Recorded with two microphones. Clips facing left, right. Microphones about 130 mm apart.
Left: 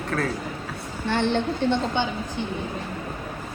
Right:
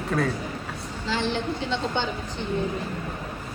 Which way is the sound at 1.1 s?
60° left (ahead or behind).